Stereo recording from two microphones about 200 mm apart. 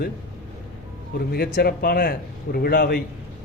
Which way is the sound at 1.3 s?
50° left (ahead or behind).